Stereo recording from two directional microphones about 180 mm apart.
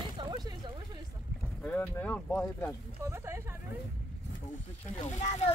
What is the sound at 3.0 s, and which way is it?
Speech, 15° right (ahead or behind).